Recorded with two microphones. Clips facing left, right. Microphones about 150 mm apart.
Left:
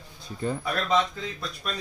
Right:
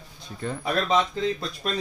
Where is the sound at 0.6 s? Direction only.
25° right (ahead or behind).